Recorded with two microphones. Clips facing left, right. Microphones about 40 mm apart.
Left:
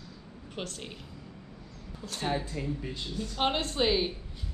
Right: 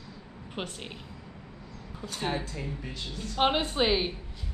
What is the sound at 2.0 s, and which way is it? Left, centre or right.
A woman's voice, centre.